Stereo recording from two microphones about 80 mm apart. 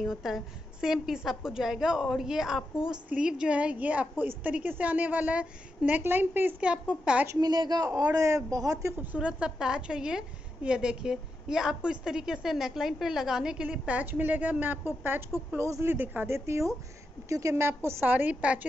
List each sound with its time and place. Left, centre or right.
0.0 s a woman's voice: centre; by 6.5 s right
6.6 s a woman's voice: centre
7.3 s a woman's voice: right
7.9 s speech: right
8.9 s a woman's voice: right
15.5 s a woman's voice: right
15.9 s a woman's voice: right
16.3 s a woman's voice: right
17.6 s a woman's voice: right
18.1 s a woman's voice: centre